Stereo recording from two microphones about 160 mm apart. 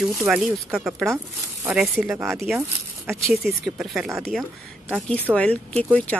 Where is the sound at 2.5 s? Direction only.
15° right (ahead or behind).